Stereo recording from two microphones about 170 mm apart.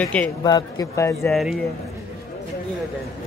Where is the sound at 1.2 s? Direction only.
Centre (ahead or behind).